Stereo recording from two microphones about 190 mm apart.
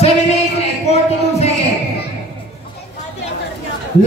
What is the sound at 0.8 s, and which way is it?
Speech, 35° left (ahead or behind).